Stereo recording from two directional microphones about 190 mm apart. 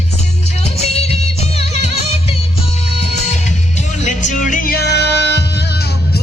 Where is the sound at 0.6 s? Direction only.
35° left (ahead or behind).